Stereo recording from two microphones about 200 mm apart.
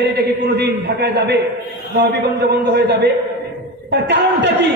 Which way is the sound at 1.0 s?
55° right (ahead or behind).